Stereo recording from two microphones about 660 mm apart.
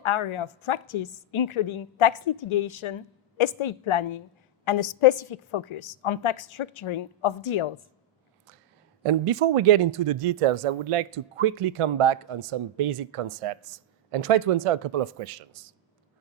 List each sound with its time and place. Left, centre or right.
0.0 s a woman's voice: left
9.0 s speech: right